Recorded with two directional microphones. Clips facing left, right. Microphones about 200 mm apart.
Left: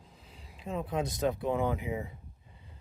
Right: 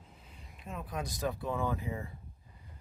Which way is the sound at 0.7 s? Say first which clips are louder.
Left 7 dB; 25° left (ahead or behind).